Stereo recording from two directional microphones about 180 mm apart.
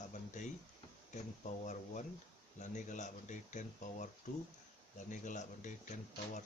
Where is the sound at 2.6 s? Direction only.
45° left (ahead or behind).